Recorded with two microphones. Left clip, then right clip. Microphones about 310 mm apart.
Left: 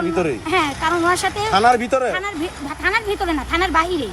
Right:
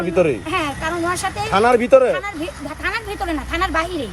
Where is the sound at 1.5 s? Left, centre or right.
Right.